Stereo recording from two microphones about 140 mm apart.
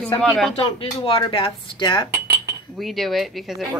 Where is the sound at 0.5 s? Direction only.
40° left (ahead or behind).